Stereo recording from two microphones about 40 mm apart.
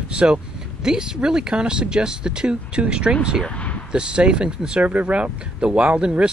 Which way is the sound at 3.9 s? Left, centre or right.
Right.